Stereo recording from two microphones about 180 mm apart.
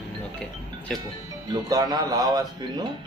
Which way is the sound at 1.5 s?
20° right (ahead or behind).